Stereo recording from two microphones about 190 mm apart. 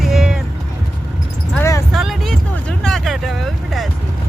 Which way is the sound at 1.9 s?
Centre (ahead or behind).